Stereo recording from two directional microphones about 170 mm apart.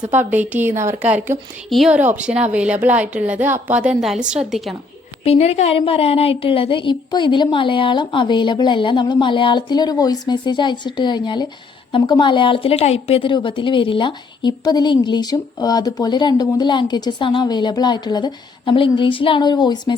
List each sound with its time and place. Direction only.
0.0 s a woman's voice: 10° right (ahead or behind)
5.2 s a woman's voice: 40° left (ahead or behind)